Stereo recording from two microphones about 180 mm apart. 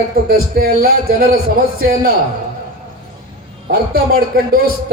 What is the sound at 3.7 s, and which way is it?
Speech, 55° right (ahead or behind).